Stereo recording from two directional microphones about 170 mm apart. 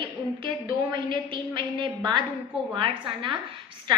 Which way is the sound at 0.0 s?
30° right (ahead or behind).